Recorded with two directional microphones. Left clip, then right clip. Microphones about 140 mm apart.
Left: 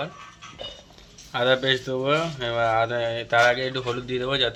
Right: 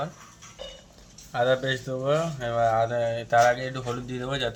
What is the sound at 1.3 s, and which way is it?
Speech, centre (ahead or behind).